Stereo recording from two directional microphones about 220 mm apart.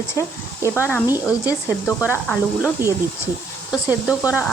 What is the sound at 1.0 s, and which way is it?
Speech, 10° right (ahead or behind).